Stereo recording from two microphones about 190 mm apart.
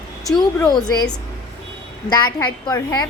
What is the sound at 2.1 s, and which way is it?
A woman's voice, 20° left (ahead or behind).